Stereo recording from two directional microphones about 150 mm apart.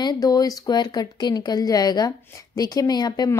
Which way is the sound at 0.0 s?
25° left (ahead or behind).